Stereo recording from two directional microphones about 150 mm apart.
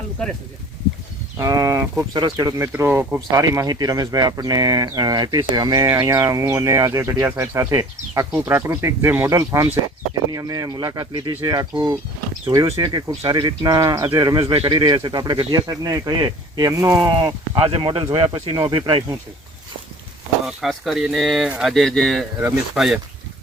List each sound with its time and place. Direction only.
0.2 s speech: 5° left (ahead or behind)
1.4 s speech: 20° right (ahead or behind)
12.5 s speech: 20° right (ahead or behind)
14.4 s speech: 35° right (ahead or behind)
20.5 s speech: centre (ahead or behind)